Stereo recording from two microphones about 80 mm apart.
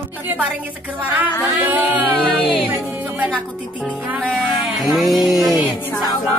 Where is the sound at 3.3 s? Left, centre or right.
Centre.